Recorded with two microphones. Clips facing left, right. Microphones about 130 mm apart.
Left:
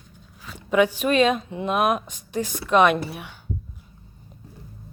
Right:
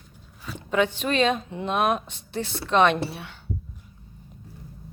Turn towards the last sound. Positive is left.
turn(degrees=15)  # may be behind; listen again after turning